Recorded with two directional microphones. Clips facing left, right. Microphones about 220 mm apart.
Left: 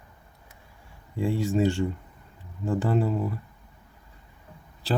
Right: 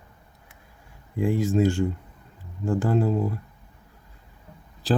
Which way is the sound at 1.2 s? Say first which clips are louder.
Right 3 dB; 15° right (ahead or behind).